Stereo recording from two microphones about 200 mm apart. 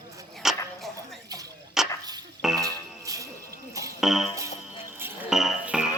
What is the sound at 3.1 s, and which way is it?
Music, 15° right (ahead or behind).